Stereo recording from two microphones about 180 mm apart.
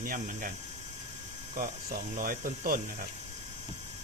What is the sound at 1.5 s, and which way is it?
Speech, 50° right (ahead or behind).